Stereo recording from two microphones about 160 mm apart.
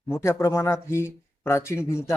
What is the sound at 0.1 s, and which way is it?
Speech, 15° left (ahead or behind).